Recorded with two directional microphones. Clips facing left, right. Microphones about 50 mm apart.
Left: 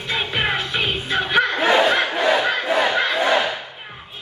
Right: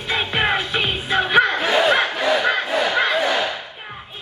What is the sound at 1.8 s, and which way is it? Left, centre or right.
Battle cry, centre.